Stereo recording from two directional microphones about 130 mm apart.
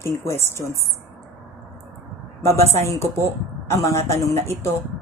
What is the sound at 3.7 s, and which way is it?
Speech, 20° left (ahead or behind).